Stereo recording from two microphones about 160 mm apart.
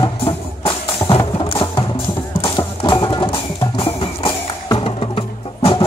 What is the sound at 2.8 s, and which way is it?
Music, 30° left (ahead or behind).